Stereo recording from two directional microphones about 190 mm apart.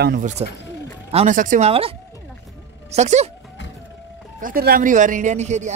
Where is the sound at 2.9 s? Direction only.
35° right (ahead or behind).